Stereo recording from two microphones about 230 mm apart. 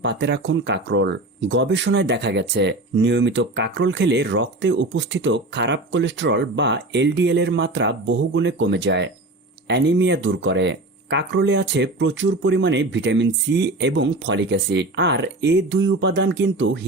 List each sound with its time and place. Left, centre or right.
0.0 s speech: right